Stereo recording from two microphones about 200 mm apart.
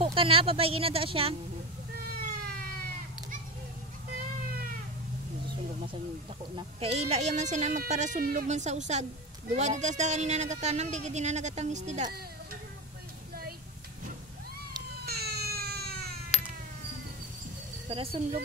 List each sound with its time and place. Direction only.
0.0 s speech: 25° right (ahead or behind)
6.5 s speech: 30° right (ahead or behind)
15.0 s baby cry: 50° right (ahead or behind)
17.8 s speech: 30° right (ahead or behind)